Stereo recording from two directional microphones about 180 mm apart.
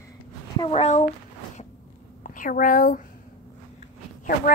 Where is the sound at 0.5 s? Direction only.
30° left (ahead or behind).